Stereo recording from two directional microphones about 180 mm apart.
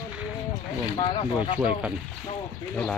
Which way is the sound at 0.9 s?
25° left (ahead or behind).